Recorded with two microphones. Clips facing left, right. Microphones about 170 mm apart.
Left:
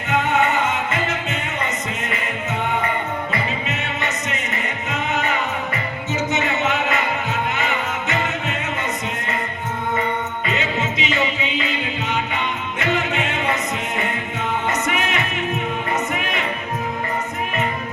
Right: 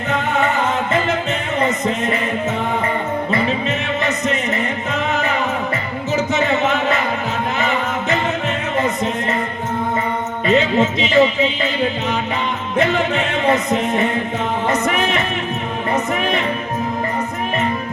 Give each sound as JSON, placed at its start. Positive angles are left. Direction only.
{"t": 0.1, "sound": "music", "side_deg": -35}
{"t": 6.3, "sound": "a sound", "side_deg": -35}
{"t": 10.5, "sound": "music", "side_deg": -35}
{"t": 12.8, "sound": "music", "side_deg": -35}